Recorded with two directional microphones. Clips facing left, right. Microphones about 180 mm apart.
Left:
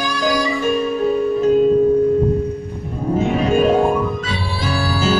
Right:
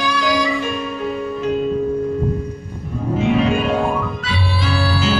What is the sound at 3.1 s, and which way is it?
Music, 40° left (ahead or behind).